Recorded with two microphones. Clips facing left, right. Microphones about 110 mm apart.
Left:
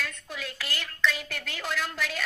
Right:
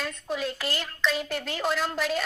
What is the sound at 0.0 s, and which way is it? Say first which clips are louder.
A woman's voice: right 6 dB; 25° right (ahead or behind).